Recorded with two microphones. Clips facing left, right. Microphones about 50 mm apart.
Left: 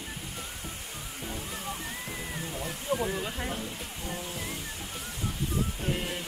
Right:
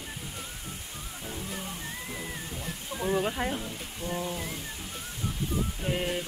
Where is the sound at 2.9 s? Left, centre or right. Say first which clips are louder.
Left 8 dB; left.